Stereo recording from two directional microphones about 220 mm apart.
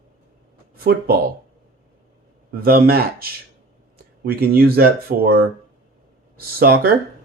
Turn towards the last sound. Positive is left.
turn(degrees=-45)  # may be behind; listen again after turning